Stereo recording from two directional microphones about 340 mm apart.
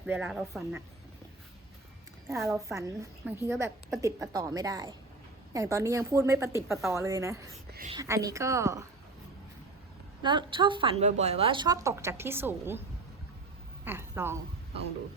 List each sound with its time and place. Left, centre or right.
0.0 s speech: centre
2.3 s a woman's voice: centre
7.7 s speech: right
7.9 s a woman's voice: centre
10.2 s a woman's voice: centre
13.8 s a woman's voice: centre